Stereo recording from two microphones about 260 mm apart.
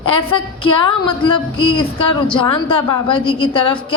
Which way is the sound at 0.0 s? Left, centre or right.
Centre.